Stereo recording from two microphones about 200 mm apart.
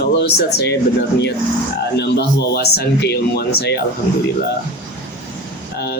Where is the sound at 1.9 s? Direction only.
55° left (ahead or behind).